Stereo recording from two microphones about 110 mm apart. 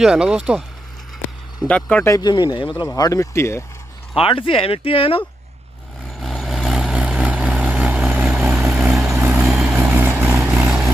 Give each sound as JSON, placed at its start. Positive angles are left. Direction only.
{"t": 0.0, "sound": "speech", "side_deg": -5}
{"t": 1.7, "sound": "speech", "side_deg": 10}
{"t": 2.0, "sound": "speech", "side_deg": 35}
{"t": 3.0, "sound": "speech", "side_deg": 30}
{"t": 4.1, "sound": "speech", "side_deg": 55}
{"t": 6.1, "sound": "vehicle", "side_deg": 0}
{"t": 9.4, "sound": "vehicle", "side_deg": -10}
{"t": 10.5, "sound": "vehicle", "side_deg": -10}